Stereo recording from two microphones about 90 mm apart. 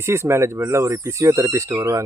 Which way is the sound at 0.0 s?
30° right (ahead or behind).